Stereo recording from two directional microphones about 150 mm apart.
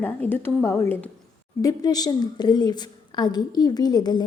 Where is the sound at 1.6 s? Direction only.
25° left (ahead or behind).